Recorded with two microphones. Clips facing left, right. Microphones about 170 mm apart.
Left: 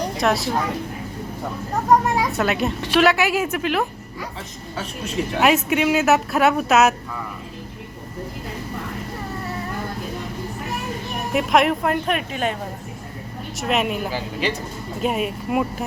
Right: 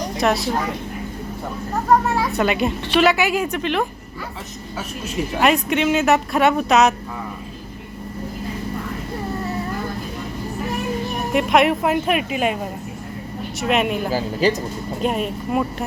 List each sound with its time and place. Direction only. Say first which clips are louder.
0.2 s speech: right 2 dB; centre (ahead or behind)
2.3 s speech: right 2 dB; centre (ahead or behind)
5.4 s speech: even; 5° left (ahead or behind)
11.3 s speech: right 1 dB; centre (ahead or behind)
13.6 s speech: right 2 dB; centre (ahead or behind)
14.1 s a woman's voice: right 6 dB; 40° right (ahead or behind)
15.0 s speech: even; 5° left (ahead or behind)